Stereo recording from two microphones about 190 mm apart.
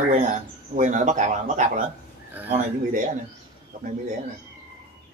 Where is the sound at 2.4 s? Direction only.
10° right (ahead or behind).